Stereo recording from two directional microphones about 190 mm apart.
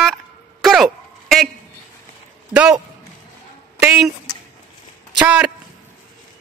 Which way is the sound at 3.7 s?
5° right (ahead or behind).